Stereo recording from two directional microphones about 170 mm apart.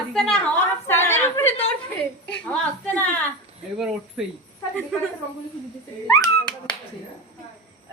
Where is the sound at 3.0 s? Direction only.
10° left (ahead or behind).